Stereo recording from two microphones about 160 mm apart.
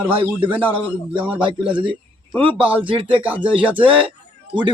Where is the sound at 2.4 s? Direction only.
35° right (ahead or behind).